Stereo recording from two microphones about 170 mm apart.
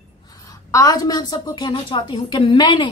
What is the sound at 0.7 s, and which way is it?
A woman's voice, 20° left (ahead or behind).